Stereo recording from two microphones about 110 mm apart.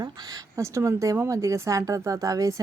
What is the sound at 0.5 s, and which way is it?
Speech, 25° right (ahead or behind).